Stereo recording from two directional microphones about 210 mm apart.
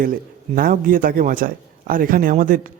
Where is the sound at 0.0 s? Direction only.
40° right (ahead or behind).